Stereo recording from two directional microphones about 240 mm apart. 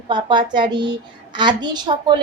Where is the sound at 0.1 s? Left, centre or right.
Centre.